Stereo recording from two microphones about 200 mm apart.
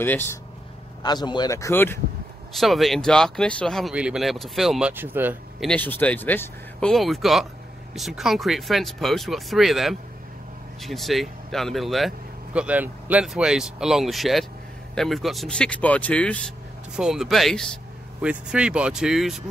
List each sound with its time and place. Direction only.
0.0 s speech: 10° left (ahead or behind)
1.0 s speech: 20° left (ahead or behind)
2.5 s speech: centre (ahead or behind)
5.7 s speech: 10° left (ahead or behind)